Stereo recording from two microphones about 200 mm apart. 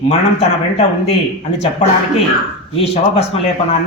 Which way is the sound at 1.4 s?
35° left (ahead or behind).